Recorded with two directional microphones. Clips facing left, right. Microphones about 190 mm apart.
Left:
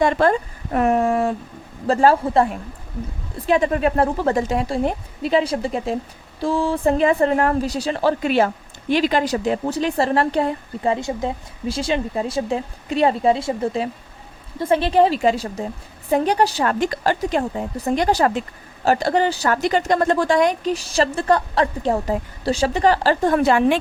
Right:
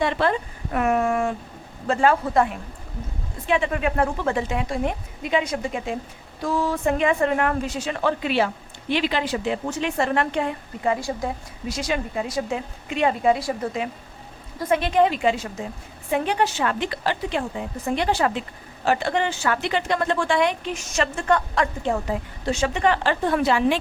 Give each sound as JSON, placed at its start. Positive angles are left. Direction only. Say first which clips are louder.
{"t": 0.0, "sound": "a woman's voice", "louder": "left 5 dB", "side_deg": 45}
{"t": 10.9, "sound": "a woman's voice", "louder": "left 3 dB", "side_deg": 25}